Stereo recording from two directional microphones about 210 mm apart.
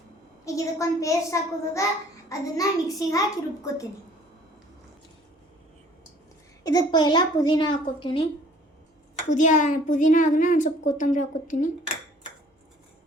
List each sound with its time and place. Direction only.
0.4 s a child's voice: 15° left (ahead or behind)
6.7 s a woman's voice: 20° left (ahead or behind)
9.3 s a woman's voice: 35° left (ahead or behind)